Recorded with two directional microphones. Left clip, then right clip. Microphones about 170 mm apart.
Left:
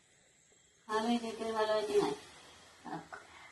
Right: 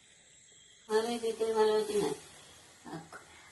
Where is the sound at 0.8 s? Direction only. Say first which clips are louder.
Right 3 dB; centre (ahead or behind).